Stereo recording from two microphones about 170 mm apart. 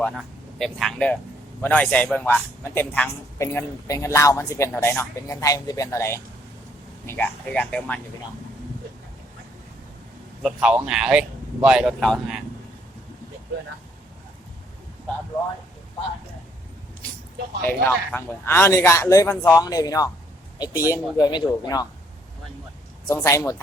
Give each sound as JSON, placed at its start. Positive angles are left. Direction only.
{"t": 0.0, "sound": "speech", "side_deg": 0}
{"t": 10.4, "sound": "speech", "side_deg": -5}
{"t": 17.7, "sound": "speech", "side_deg": 10}
{"t": 23.0, "sound": "speech", "side_deg": 20}